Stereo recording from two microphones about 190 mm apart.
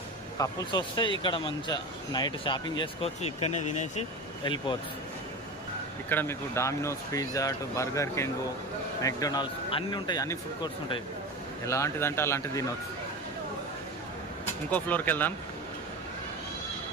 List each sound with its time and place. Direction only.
0.3 s speech: 20° left (ahead or behind); by 4.0 s 35° left (ahead or behind)
4.4 s speech: 25° left (ahead or behind)
6.1 s speech: 10° left (ahead or behind)
14.7 s speech: 10° left (ahead or behind)